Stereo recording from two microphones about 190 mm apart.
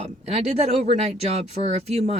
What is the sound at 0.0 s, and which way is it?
Speech, 35° right (ahead or behind).